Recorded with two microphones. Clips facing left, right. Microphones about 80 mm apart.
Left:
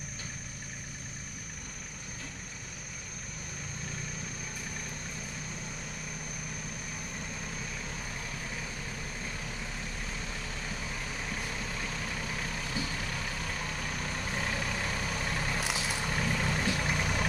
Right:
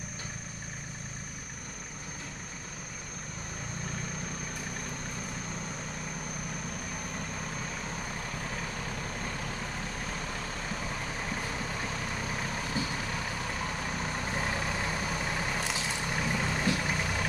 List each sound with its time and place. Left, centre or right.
12.4 s vehicle: right; by 16.8 s centre
16.8 s vehicle: centre